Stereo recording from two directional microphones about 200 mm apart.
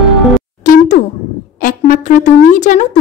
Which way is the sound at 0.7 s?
40° left (ahead or behind).